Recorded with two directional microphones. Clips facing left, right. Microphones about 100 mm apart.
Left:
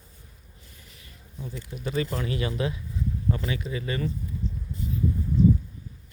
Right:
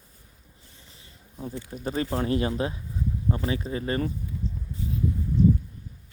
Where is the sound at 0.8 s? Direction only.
30° right (ahead or behind).